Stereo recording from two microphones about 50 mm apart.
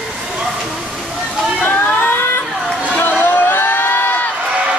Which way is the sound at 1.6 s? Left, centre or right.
Left.